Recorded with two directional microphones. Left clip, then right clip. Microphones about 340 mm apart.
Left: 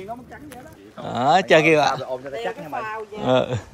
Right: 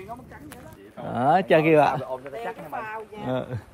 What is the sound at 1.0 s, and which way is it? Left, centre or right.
Speech, centre.